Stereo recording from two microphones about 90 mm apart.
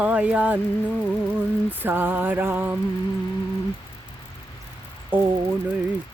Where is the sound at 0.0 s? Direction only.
15° right (ahead or behind).